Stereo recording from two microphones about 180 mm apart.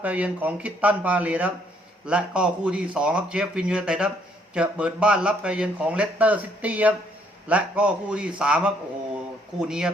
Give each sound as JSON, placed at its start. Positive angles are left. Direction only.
{"t": 0.0, "sound": "speech", "side_deg": -10}